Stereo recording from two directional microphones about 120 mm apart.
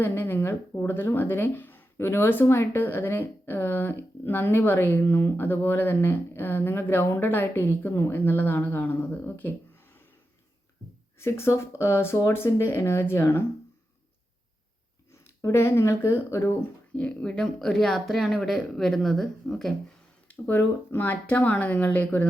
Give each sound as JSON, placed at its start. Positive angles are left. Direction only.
{"t": 0.0, "sound": "speech", "side_deg": 20}
{"t": 11.2, "sound": "speech", "side_deg": 20}
{"t": 15.1, "sound": "speech", "side_deg": 25}
{"t": 17.0, "sound": "speech", "side_deg": 10}
{"t": 20.2, "sound": "speech", "side_deg": 15}